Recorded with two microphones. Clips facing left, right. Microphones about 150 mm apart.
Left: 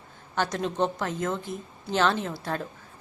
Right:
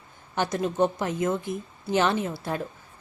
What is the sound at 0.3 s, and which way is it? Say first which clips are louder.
A woman's voice: right 2 dB; 10° right (ahead or behind).